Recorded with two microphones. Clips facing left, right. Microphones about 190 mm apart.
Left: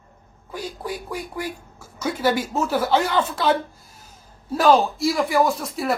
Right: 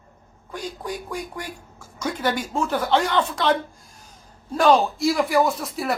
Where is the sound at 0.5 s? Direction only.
5° left (ahead or behind).